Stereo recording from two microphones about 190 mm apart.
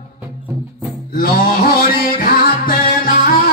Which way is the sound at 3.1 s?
50° left (ahead or behind).